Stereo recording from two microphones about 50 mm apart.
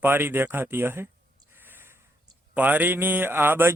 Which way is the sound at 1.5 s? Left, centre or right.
Right.